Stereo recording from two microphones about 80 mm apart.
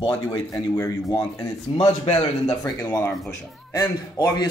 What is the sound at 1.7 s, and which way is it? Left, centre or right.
Speech, left.